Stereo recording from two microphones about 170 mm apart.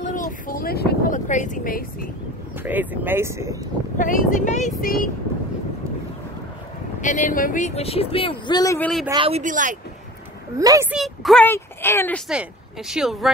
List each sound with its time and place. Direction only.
0.0 s a sound: 50° left (ahead or behind)
1.1 s speech: 45° left (ahead or behind)
2.6 s speech: 10° right (ahead or behind)
4.0 s speech: 50° left (ahead or behind)
7.0 s speech: 50° left (ahead or behind); by 8.7 s 25° left (ahead or behind)
8.7 s speech: 5° left (ahead or behind)
9.1 s speech: 30° right (ahead or behind)
9.4 s speech: 50° right (ahead or behind)
10.6 s speech: 20° right (ahead or behind)
10.9 s a woman's voice: centre (ahead or behind)
11.4 s speech: 15° left (ahead or behind)
12.3 s speech: 5° right (ahead or behind)